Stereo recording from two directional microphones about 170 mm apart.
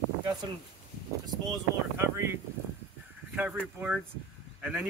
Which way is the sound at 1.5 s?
15° right (ahead or behind).